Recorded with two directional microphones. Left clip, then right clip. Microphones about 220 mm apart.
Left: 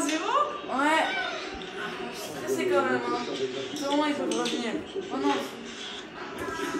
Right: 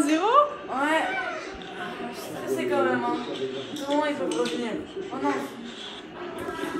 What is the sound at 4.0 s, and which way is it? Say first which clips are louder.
Speech: right 3 dB; centre (ahead or behind).